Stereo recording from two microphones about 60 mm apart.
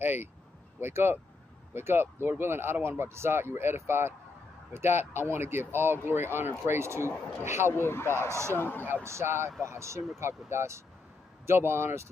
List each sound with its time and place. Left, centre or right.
0.0 s speech: right
7.7 s speech: left
8.3 s speech: right
8.5 s speech: left
9.0 s speech: right